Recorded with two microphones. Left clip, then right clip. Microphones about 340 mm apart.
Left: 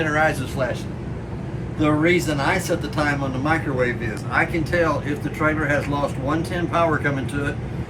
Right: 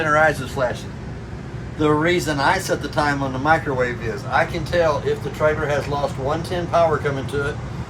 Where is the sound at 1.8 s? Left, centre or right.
Right.